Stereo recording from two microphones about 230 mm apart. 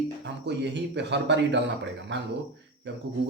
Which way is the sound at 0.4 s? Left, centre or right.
Right.